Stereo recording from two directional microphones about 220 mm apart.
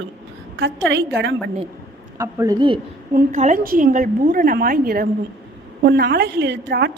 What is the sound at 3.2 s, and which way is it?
A woman's voice, 35° right (ahead or behind).